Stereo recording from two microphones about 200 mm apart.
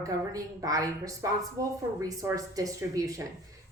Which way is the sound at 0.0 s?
15° right (ahead or behind).